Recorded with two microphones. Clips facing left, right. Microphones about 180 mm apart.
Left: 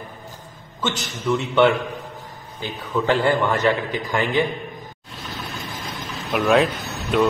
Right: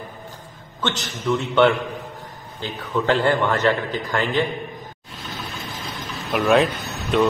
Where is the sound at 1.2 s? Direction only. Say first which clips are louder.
Even; 5° left (ahead or behind).